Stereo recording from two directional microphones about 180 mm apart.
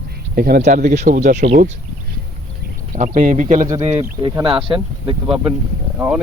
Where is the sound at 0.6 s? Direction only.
45° right (ahead or behind).